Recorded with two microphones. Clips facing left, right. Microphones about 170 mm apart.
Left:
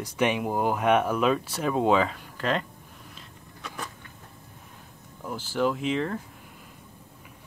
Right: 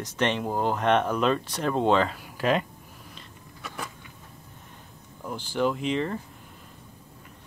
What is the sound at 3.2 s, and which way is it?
Vehicle, 5° right (ahead or behind).